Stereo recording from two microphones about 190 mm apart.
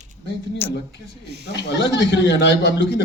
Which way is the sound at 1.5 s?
65° left (ahead or behind).